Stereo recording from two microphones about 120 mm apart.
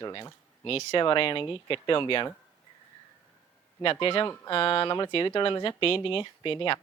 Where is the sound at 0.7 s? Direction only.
55° left (ahead or behind).